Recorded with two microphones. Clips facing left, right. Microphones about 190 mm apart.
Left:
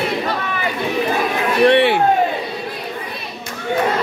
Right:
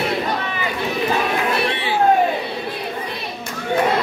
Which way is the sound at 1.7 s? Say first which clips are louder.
Left 11 dB; 65° left (ahead or behind).